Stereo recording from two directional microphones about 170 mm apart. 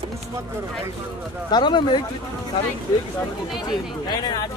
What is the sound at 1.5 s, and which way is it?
Speech, 25° left (ahead or behind).